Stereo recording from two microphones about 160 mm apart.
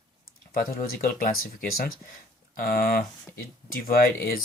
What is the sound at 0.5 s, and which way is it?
Speech, 70° left (ahead or behind).